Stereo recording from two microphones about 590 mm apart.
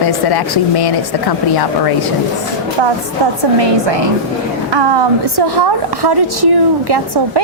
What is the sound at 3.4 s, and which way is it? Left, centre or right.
A woman's voice, right.